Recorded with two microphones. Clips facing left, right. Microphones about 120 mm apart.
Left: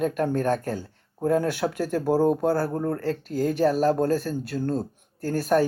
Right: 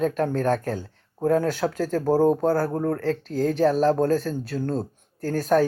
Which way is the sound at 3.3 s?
5° left (ahead or behind).